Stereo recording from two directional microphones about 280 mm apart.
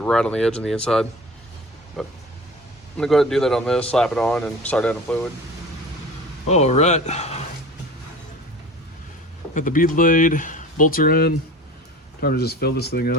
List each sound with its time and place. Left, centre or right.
0.0 s speech: centre
6.5 s speech: left
9.6 s speech: left